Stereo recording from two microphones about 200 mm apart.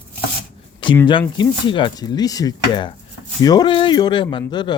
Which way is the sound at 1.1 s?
25° left (ahead or behind).